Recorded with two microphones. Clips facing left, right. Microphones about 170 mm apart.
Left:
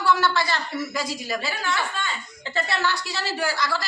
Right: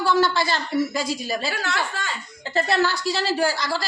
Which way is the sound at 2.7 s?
35° right (ahead or behind).